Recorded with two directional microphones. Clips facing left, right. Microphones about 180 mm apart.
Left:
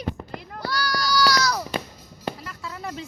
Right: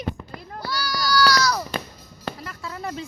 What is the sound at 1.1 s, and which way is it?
Baby cry, 20° left (ahead or behind).